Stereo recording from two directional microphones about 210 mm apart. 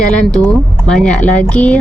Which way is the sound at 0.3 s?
5° left (ahead or behind).